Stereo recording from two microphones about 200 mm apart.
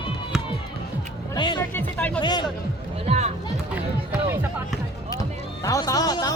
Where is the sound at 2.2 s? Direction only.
20° left (ahead or behind).